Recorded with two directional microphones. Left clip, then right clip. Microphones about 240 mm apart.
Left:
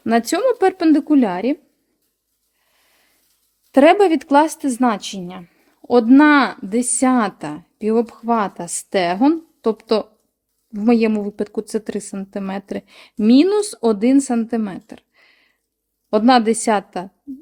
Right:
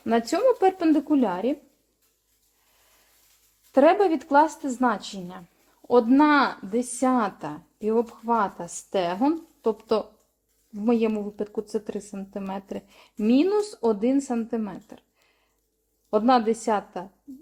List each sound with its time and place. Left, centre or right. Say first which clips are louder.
0.0 s speech: left 5 dB; left
3.7 s speech: left 7 dB; left